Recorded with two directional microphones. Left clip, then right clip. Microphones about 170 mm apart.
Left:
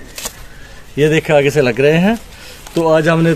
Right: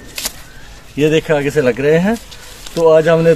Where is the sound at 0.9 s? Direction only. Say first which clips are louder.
Left 2 dB; 75° left (ahead or behind).